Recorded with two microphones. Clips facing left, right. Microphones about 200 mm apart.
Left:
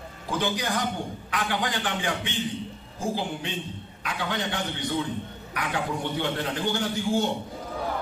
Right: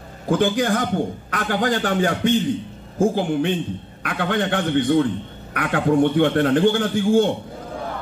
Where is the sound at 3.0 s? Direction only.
55° right (ahead or behind).